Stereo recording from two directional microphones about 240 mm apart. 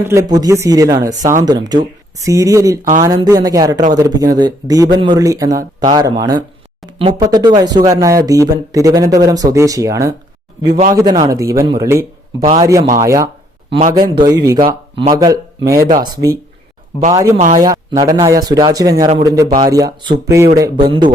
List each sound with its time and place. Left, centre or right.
0.0 s a man's voice: centre
12.6 s speech: centre
13.7 s a man's voice: right
17.3 s speech: right
17.6 s a man's voice: centre